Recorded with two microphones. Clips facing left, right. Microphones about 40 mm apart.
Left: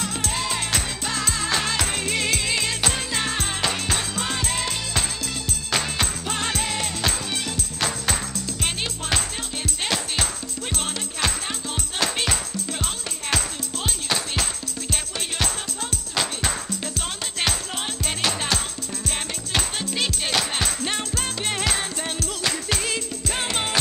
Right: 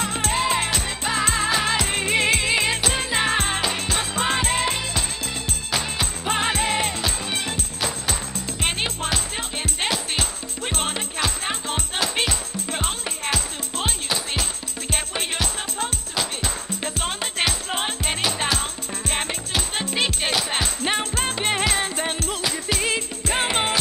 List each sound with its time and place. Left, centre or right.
0.3 s music: right
5.7 s music: centre
6.2 s music: right
8.5 s music: right
10.7 s music: right
16.8 s music: right
19.8 s music: right